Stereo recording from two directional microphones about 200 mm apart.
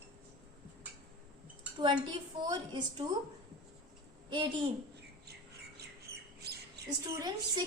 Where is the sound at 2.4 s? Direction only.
20° right (ahead or behind).